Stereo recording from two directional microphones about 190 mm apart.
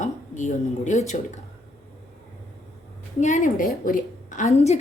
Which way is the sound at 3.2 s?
40° left (ahead or behind).